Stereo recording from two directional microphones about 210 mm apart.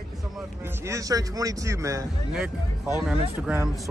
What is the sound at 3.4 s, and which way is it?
Speech, 5° right (ahead or behind).